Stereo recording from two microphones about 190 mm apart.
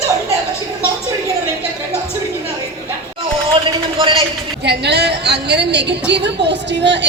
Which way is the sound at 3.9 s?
30° right (ahead or behind).